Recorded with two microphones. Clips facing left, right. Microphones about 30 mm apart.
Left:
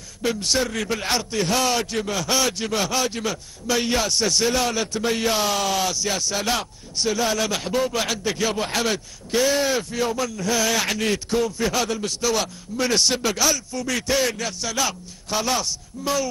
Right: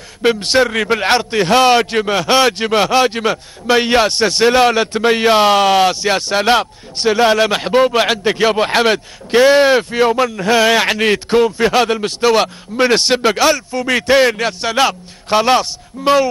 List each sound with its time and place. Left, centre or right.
0.2 s a man's voice: right